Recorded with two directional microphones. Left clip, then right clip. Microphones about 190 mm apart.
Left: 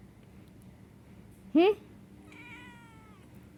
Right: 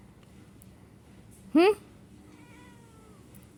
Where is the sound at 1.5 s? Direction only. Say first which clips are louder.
Right 2 dB; centre (ahead or behind).